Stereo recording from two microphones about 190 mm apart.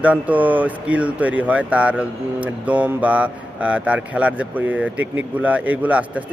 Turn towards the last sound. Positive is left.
turn(degrees=-10)  # may be behind; listen again after turning